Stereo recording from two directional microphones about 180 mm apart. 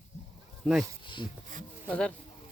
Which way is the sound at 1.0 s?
25° left (ahead or behind).